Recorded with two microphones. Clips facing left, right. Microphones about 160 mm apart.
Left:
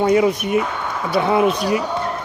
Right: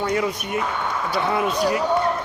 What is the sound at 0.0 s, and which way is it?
Speech, 20° left (ahead or behind).